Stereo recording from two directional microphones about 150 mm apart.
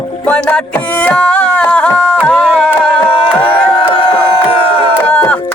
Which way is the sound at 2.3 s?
5° right (ahead or behind).